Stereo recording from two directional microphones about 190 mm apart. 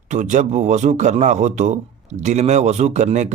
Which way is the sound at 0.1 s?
40° right (ahead or behind).